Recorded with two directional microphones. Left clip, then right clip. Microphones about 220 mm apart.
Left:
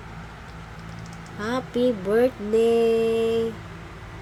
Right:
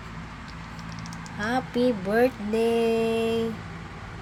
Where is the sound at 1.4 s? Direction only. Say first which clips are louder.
Left 1 dB; 15° left (ahead or behind).